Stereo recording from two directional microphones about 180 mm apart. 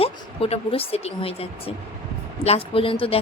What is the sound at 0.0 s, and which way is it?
A woman's voice, 30° left (ahead or behind).